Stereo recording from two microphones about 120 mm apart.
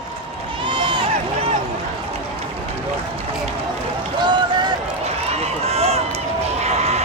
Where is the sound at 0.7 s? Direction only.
40° right (ahead or behind).